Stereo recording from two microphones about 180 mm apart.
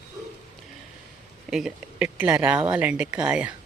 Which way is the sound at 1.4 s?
5° right (ahead or behind).